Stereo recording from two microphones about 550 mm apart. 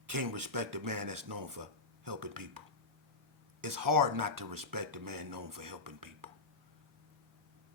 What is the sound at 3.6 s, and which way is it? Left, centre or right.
Speech, right.